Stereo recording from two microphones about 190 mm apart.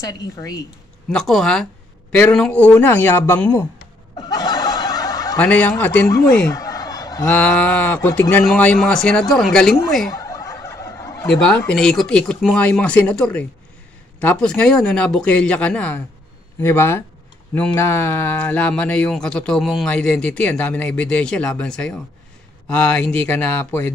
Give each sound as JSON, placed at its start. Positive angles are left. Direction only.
{"t": 0.0, "sound": "speech", "side_deg": 20}
{"t": 1.0, "sound": "speech", "side_deg": 5}
{"t": 4.2, "sound": "snicker", "side_deg": 20}
{"t": 5.4, "sound": "speech", "side_deg": 5}
{"t": 10.1, "sound": "turkey", "side_deg": 20}
{"t": 11.2, "sound": "speech", "side_deg": 5}